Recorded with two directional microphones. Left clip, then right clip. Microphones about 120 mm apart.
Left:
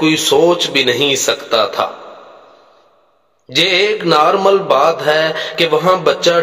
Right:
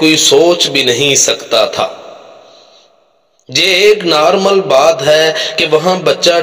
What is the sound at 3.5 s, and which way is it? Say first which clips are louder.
A man's voice: right 4 dB; 30° right (ahead or behind).